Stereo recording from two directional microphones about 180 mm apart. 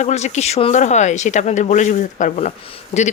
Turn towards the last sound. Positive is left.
turn(degrees=40)  # may be behind; listen again after turning